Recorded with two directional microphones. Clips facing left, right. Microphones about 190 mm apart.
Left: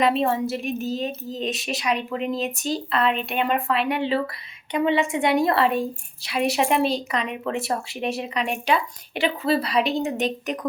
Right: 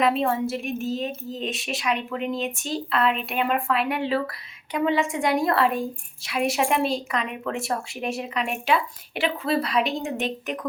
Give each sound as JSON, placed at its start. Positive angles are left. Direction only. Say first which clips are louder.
{"t": 0.0, "sound": "a woman's voice", "louder": "left 1 dB", "side_deg": 0}